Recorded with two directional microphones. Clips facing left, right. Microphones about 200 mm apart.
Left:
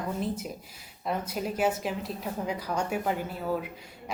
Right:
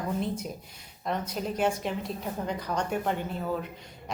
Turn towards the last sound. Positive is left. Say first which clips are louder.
# left 1 dB
turn(degrees=5)  # may be behind; listen again after turning